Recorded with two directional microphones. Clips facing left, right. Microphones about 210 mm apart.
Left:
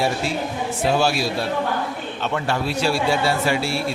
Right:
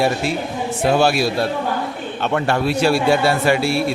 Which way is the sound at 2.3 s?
60° right (ahead or behind).